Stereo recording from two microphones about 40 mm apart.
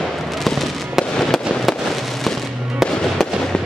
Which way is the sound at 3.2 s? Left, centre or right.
Centre.